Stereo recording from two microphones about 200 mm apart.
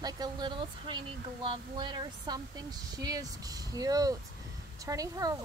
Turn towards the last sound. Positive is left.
turn(degrees=-15)  # may be behind; listen again after turning